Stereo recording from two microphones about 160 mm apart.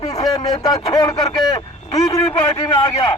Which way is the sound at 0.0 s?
40° left (ahead or behind).